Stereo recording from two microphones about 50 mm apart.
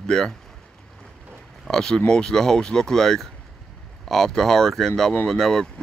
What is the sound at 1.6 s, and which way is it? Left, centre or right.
Speech, centre.